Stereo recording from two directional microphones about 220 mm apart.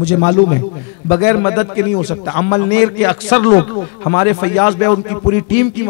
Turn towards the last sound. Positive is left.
turn(degrees=15)  # may be behind; listen again after turning